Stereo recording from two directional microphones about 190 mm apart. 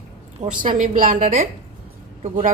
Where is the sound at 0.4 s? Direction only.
40° right (ahead or behind).